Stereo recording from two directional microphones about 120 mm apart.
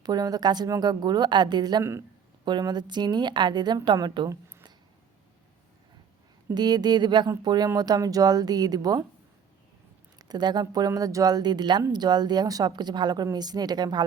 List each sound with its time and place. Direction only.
0.0 s a woman's voice: 35° right (ahead or behind)
1.8 s speech: 20° right (ahead or behind)
2.4 s a woman's voice: 40° right (ahead or behind)
6.5 s a woman's voice: 35° right (ahead or behind)
10.2 s a woman's voice: 35° right (ahead or behind)